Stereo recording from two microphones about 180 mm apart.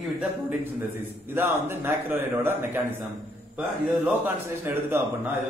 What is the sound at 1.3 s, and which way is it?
A man's voice, 10° right (ahead or behind).